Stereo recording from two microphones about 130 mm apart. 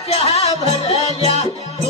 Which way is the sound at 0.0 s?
50° left (ahead or behind).